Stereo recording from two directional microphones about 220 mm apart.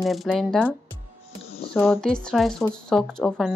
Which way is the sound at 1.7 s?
Centre (ahead or behind).